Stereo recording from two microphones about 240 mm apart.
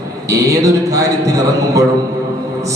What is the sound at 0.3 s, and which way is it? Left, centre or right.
Speech, centre.